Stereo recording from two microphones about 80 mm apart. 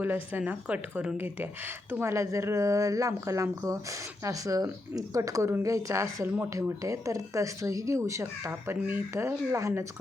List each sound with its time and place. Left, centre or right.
0.0 s a woman's voice: right
6.2 s speech: right
6.8 s a woman's voice: right